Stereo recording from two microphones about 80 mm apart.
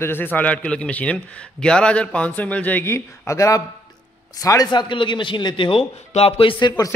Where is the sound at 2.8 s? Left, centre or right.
Left.